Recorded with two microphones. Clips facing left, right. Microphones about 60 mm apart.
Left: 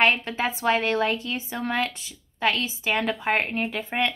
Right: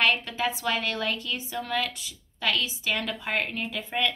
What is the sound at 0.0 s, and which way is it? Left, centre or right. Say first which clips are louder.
A woman's voice: left 3 dB; left.